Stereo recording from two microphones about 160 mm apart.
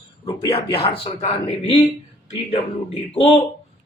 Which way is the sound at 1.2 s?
35° left (ahead or behind).